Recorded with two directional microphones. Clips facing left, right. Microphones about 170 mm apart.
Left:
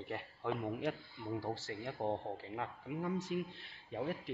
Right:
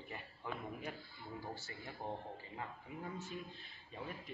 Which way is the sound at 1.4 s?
90° left.